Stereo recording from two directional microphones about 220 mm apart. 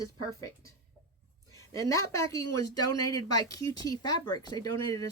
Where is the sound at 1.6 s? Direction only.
15° left (ahead or behind).